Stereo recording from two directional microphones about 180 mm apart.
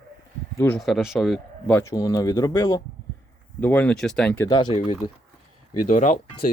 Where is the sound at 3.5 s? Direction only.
10° left (ahead or behind).